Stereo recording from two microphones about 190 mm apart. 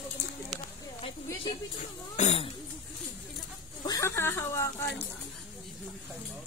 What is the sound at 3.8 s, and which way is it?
Speech, 15° left (ahead or behind).